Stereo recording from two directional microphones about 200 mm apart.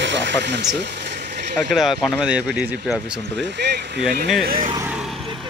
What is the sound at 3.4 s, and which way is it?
Speech, 60° right (ahead or behind).